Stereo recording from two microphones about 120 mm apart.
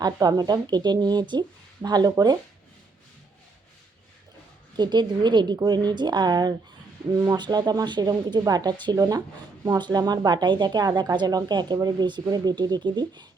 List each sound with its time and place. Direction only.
0.0 s speech: 30° right (ahead or behind)
4.8 s speech: 40° right (ahead or behind)